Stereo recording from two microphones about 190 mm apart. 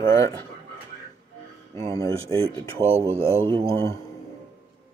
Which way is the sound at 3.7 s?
15° left (ahead or behind).